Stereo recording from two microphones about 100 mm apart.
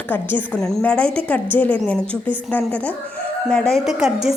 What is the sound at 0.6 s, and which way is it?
A woman's voice, 5° left (ahead or behind).